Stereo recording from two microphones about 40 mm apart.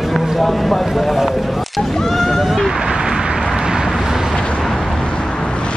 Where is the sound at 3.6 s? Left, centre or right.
Centre.